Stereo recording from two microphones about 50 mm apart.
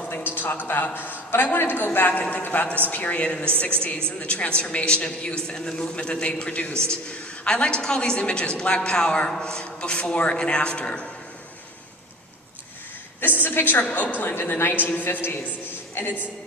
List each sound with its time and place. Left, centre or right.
0.1 s a man's voice: left
13.4 s a woman's voice: left
13.8 s a woman's voice: left